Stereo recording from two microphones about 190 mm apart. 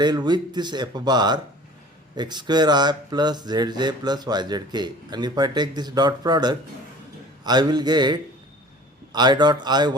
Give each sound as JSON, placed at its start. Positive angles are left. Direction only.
{"t": 0.0, "sound": "speech", "side_deg": -20}